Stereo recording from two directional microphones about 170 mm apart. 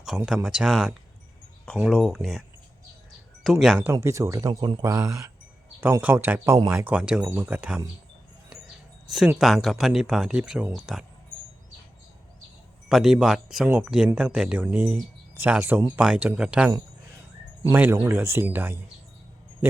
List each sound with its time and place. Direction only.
0.1 s speech: 5° right (ahead or behind)
3.4 s speech: centre (ahead or behind)
3.9 s speech: 20° right (ahead or behind)
9.0 s speech: 5° right (ahead or behind)
12.9 s speech: 5° right (ahead or behind)
17.7 s speech: 10° right (ahead or behind)